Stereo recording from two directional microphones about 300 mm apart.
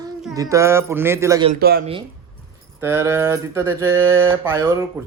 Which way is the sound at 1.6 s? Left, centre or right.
Right.